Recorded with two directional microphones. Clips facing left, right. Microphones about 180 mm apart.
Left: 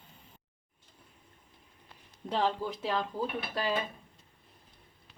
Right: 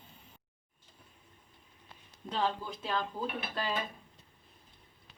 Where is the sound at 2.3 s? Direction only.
70° left (ahead or behind).